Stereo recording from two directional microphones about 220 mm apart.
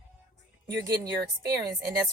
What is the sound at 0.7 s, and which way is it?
Speech, 15° right (ahead or behind).